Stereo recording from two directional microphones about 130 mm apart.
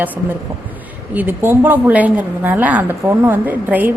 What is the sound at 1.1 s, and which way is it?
A woman's voice, 15° right (ahead or behind).